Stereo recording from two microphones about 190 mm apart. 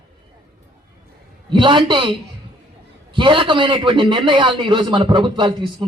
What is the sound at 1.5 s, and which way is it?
Speech, 25° right (ahead or behind).